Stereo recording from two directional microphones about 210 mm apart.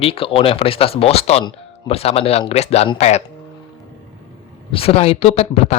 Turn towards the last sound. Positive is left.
turn(degrees=30)  # may be behind; listen again after turning